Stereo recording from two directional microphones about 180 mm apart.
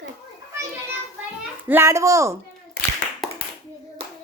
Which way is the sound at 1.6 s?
15° right (ahead or behind).